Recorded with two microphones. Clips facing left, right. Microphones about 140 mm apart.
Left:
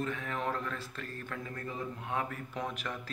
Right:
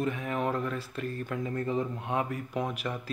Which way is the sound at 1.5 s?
25° right (ahead or behind).